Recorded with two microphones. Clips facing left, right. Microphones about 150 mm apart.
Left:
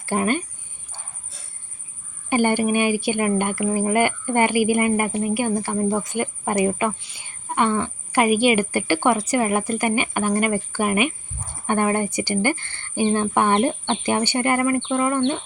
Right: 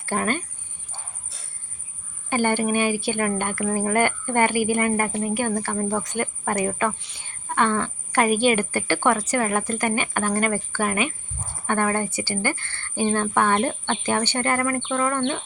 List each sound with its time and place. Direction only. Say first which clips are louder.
0.0 s speech: left 3 dB; 15° left (ahead or behind)
2.3 s a woman's voice: left 3 dB; 15° left (ahead or behind)